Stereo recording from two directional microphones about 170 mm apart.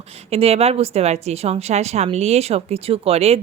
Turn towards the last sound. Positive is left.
turn(degrees=-35)  # may be behind; listen again after turning